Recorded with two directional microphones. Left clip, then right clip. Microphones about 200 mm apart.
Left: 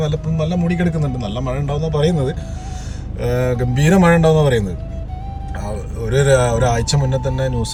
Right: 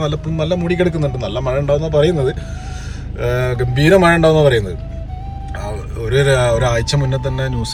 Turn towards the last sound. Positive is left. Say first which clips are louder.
# left 1 dB
turn(degrees=15)  # may be behind; listen again after turning